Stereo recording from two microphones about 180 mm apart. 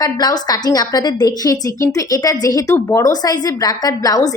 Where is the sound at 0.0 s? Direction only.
20° left (ahead or behind).